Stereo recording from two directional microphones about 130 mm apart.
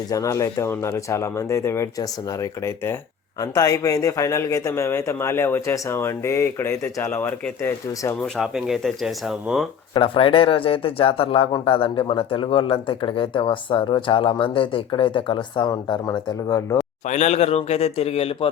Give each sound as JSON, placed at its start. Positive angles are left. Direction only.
{"t": 0.1, "sound": "speech", "side_deg": 25}
{"t": 8.4, "sound": "speech", "side_deg": -5}
{"t": 9.9, "sound": "a man's voice", "side_deg": 45}
{"t": 17.1, "sound": "speech", "side_deg": 60}